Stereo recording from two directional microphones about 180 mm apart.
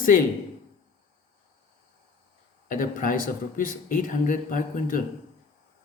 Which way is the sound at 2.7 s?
45° left (ahead or behind).